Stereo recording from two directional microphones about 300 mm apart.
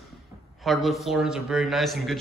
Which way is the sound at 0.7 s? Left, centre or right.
Centre.